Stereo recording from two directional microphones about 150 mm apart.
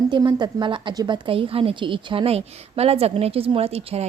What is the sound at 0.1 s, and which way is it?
A woman's voice, 30° right (ahead or behind).